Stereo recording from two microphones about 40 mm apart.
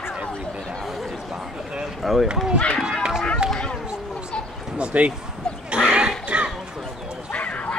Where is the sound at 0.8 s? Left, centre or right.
Centre.